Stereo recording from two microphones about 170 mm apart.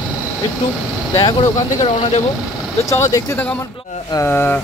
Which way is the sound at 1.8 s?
40° left (ahead or behind).